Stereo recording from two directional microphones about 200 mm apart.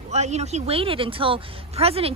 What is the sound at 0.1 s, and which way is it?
Speech, 35° right (ahead or behind).